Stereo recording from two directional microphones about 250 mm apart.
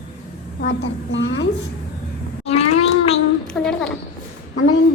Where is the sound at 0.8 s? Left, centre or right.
Left.